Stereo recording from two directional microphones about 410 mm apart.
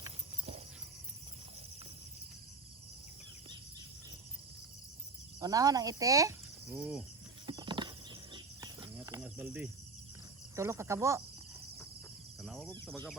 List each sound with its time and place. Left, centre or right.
0.0 s horse: centre
5.4 s speech: centre
7.4 s cricket: centre
10.5 s speech: centre
12.4 s speech: centre